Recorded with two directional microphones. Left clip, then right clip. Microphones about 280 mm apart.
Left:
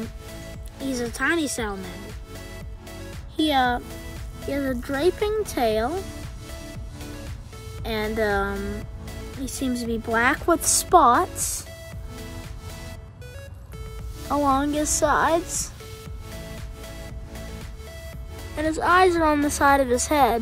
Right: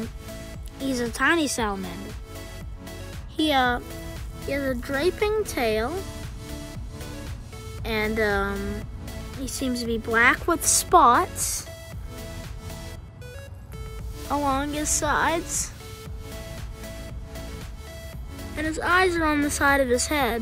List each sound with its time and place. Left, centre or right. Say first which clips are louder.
0.8 s speech: right 2 dB; centre
3.3 s speech: left 1 dB; centre
7.8 s speech: even; centre
14.3 s a woman's voice: left 3 dB; centre
18.6 s a woman's voice: left 3 dB; centre